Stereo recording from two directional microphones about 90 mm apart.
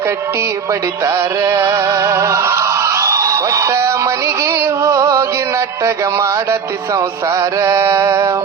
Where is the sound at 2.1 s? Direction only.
35° right (ahead or behind).